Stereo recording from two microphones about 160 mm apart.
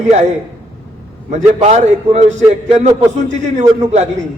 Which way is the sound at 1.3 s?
45° right (ahead or behind).